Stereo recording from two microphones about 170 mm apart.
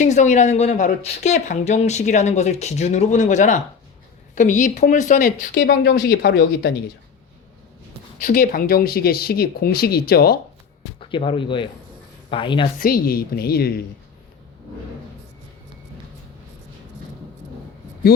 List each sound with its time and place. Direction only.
0.0 s speech: 45° left (ahead or behind)
5.2 s speech: 70° left (ahead or behind)
8.2 s speech: 50° left (ahead or behind)
11.1 s speech: 30° left (ahead or behind)
12.8 s speech: 60° left (ahead or behind)